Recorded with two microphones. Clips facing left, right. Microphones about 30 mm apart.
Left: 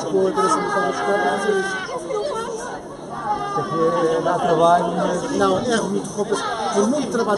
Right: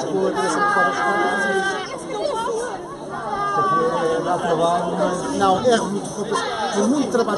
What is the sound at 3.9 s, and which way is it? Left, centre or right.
Speech, centre.